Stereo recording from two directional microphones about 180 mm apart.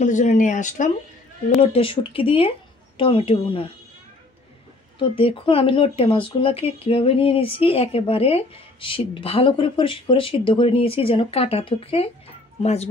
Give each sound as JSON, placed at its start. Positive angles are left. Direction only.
{"t": 0.0, "sound": "speech", "side_deg": 40}
{"t": 1.6, "sound": "speech", "side_deg": 30}
{"t": 4.9, "sound": "speech", "side_deg": 30}